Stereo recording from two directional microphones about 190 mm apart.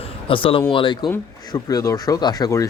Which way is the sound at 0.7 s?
25° left (ahead or behind).